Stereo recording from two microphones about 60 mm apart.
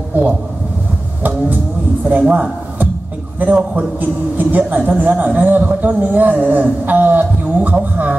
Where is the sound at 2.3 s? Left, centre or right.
Right.